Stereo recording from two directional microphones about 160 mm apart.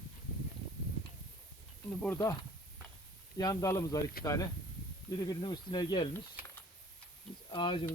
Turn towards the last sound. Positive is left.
turn(degrees=30)  # may be behind; listen again after turning